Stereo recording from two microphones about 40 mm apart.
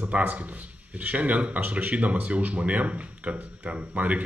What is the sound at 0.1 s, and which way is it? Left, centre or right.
A man's voice, right.